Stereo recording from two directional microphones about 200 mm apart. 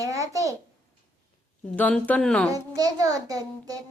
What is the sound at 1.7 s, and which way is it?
Speech, 5° left (ahead or behind).